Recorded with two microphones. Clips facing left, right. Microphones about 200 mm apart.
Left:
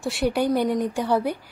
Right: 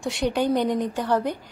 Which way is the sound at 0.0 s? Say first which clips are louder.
Left 1 dB; 10° left (ahead or behind).